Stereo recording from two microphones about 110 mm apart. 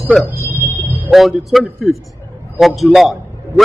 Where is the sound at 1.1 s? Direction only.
Centre (ahead or behind).